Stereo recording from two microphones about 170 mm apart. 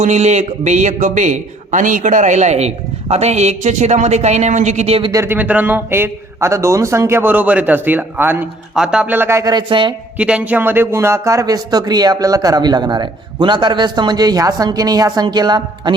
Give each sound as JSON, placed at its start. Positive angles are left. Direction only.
{"t": 0.0, "sound": "a man's voice", "side_deg": -40}
{"t": 5.1, "sound": "a man's voice", "side_deg": -15}
{"t": 10.2, "sound": "speech", "side_deg": -5}